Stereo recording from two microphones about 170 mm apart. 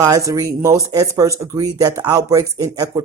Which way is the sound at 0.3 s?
20° right (ahead or behind).